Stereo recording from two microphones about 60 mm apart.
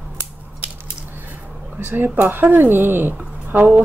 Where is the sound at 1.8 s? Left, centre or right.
Right.